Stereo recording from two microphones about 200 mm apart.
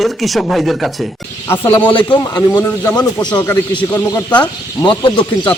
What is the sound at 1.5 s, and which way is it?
Speech, 10° left (ahead or behind).